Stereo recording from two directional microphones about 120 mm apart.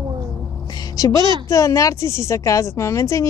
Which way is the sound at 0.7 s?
30° left (ahead or behind).